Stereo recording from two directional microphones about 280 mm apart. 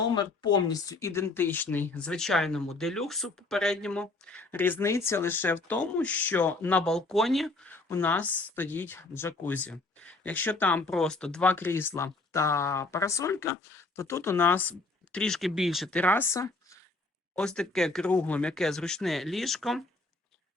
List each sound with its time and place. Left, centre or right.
0.1 s speech: centre